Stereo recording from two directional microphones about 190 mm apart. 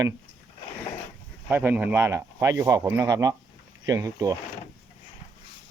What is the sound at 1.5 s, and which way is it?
Speech, 10° right (ahead or behind).